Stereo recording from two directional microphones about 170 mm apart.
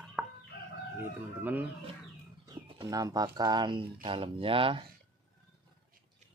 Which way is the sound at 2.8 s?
20° right (ahead or behind).